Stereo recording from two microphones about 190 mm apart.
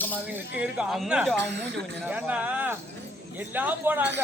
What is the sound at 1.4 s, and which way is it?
Speech, 65° right (ahead or behind).